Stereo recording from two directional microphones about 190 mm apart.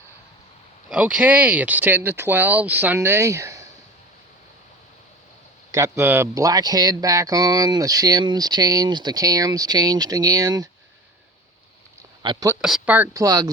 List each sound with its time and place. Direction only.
0.9 s speech: 5° right (ahead or behind)
5.7 s speech: 15° right (ahead or behind)
12.2 s speech: 25° right (ahead or behind)
12.6 s speech: 5° right (ahead or behind)